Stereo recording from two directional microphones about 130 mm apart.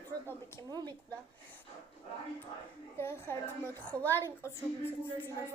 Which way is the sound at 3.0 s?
15° left (ahead or behind).